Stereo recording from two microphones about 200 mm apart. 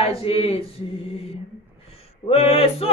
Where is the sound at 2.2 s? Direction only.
30° left (ahead or behind).